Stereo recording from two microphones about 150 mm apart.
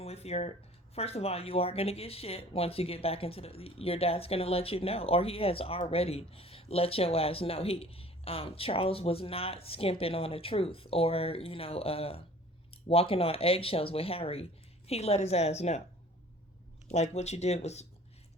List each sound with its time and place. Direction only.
0.0 s a sound: 45° left (ahead or behind)
0.9 s a woman's voice: 40° left (ahead or behind)
16.9 s a woman's voice: 50° left (ahead or behind)